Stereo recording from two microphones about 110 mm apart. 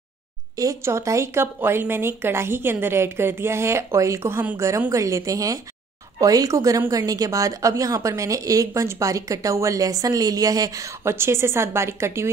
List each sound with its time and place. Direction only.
0.6 s a woman's voice: 25° right (ahead or behind)